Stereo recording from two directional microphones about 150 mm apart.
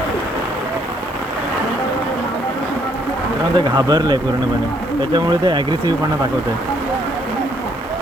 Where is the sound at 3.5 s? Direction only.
30° right (ahead or behind).